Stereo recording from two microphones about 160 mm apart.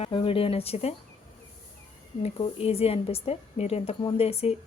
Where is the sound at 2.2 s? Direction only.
35° left (ahead or behind).